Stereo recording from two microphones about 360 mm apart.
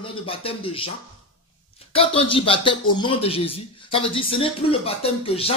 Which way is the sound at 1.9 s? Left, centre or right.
Centre.